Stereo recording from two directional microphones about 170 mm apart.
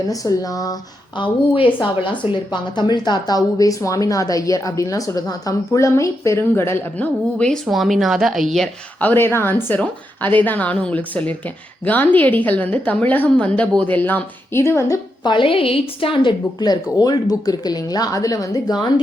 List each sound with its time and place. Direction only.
0.1 s a woman's voice: 20° left (ahead or behind)